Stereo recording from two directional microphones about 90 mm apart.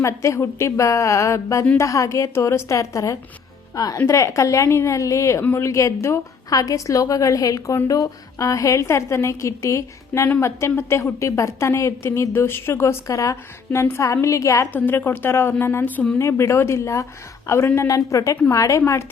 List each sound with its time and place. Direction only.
0.0 s a woman's voice: 35° left (ahead or behind)
4.0 s a woman's voice: 35° left (ahead or behind)
14.7 s a woman's voice: 20° left (ahead or behind); by 18.8 s 35° left (ahead or behind)